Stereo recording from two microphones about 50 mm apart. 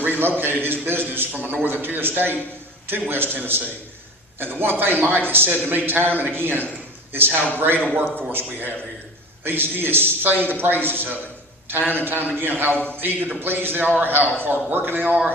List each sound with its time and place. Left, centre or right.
0.2 s a man's voice: right